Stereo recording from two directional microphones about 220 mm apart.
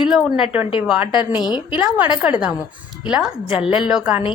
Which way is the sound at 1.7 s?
5° right (ahead or behind).